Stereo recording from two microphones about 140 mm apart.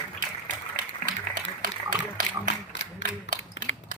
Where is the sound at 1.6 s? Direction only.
75° right (ahead or behind).